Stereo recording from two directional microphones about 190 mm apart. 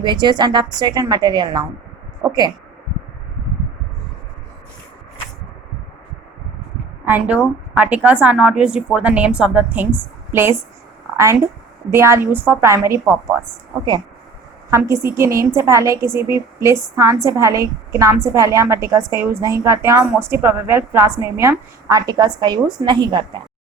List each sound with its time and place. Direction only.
0.0 s a woman's voice: 25° right (ahead or behind)
7.0 s a woman's voice: 10° right (ahead or behind)
11.9 s a woman's voice: 15° right (ahead or behind)
14.7 s a woman's voice: 15° right (ahead or behind)